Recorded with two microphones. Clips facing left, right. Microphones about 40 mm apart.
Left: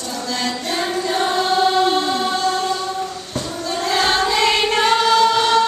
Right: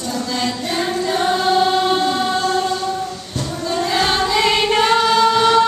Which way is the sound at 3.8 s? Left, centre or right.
Centre.